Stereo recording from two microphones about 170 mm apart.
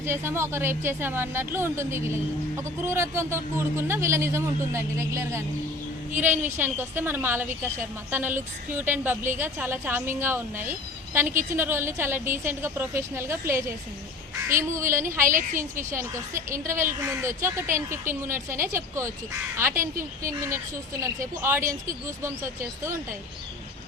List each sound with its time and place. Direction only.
0.0 s a woman's voice: 15° right (ahead or behind)
15.3 s a woman's voice: 50° right (ahead or behind)
16.5 s a woman's voice: 15° right (ahead or behind)
19.7 s a woman's voice: 55° right (ahead or behind)
20.2 s a woman's voice: 15° right (ahead or behind)